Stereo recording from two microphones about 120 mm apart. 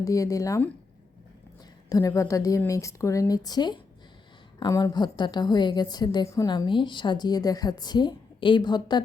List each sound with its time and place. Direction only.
0.0 s speech: 30° left (ahead or behind)
1.9 s a woman's voice: 30° left (ahead or behind)
6.5 s a woman's voice: 40° left (ahead or behind)